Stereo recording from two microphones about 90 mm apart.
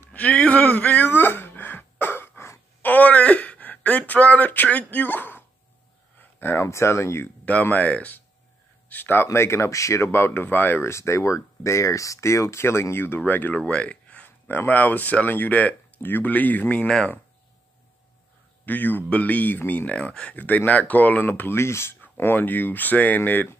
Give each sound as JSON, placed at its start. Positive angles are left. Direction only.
{"t": 0.1, "sound": "a sound", "side_deg": 15}
{"t": 6.1, "sound": "speech", "side_deg": 25}
{"t": 7.6, "sound": "speech", "side_deg": 15}
{"t": 18.7, "sound": "speech", "side_deg": 20}